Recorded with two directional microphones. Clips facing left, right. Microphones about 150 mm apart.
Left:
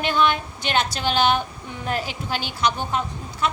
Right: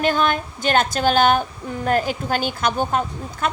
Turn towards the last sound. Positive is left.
turn(degrees=-45)  # may be behind; listen again after turning